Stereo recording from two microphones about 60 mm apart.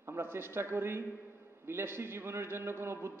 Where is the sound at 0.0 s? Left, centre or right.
Right.